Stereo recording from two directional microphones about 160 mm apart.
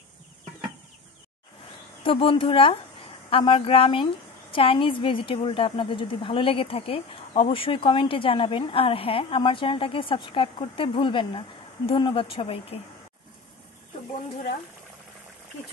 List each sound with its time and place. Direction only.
2.0 s a woman's voice: 35° left (ahead or behind)